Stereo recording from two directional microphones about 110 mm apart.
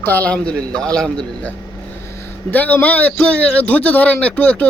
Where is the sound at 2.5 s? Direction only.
15° left (ahead or behind).